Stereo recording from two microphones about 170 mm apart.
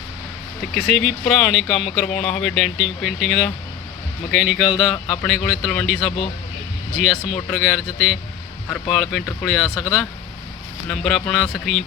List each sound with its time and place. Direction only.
0.7 s speech: centre (ahead or behind)
4.9 s speech: 25° left (ahead or behind)
5.2 s speech: centre (ahead or behind)
7.5 s speech: 5° right (ahead or behind)